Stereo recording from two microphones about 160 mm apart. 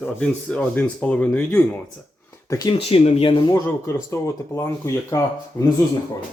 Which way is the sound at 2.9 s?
35° left (ahead or behind).